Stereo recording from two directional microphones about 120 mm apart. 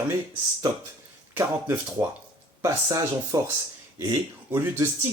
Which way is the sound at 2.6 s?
25° right (ahead or behind).